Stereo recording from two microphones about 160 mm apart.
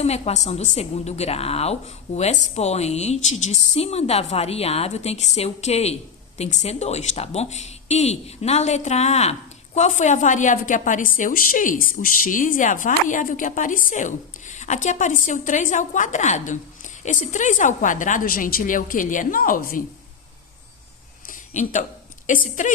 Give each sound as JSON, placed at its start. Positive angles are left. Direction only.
{"t": 0.0, "sound": "a woman's voice", "side_deg": 45}
{"t": 21.2, "sound": "a sound", "side_deg": 50}
{"t": 22.3, "sound": "speech", "side_deg": 55}